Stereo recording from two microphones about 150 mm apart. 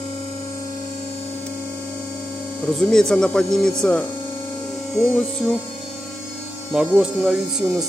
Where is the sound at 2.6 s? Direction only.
5° left (ahead or behind).